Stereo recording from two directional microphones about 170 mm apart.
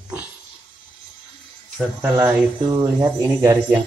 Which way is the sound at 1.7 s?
15° right (ahead or behind).